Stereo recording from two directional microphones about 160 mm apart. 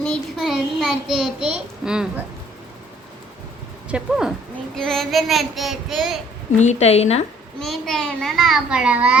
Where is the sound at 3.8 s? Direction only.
5° right (ahead or behind).